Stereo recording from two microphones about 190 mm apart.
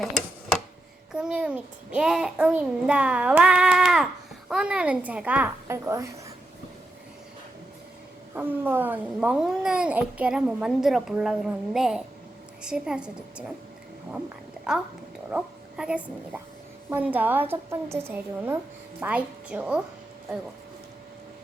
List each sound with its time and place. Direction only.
1.1 s a child's voice: 5° right (ahead or behind)
8.4 s a child's voice: 10° right (ahead or behind)
15.3 s a woman's voice: 5° right (ahead or behind)